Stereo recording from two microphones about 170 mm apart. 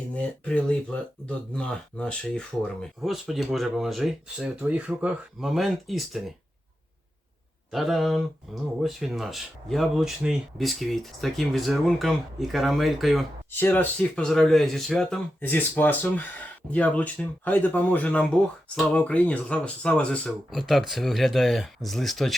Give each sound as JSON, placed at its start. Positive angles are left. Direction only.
{"t": 0.1, "sound": "speech", "side_deg": 5}
{"t": 7.7, "sound": "speech", "side_deg": 0}
{"t": 13.5, "sound": "speech", "side_deg": 10}